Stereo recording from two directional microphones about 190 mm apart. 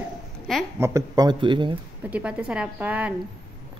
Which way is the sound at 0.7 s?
15° right (ahead or behind).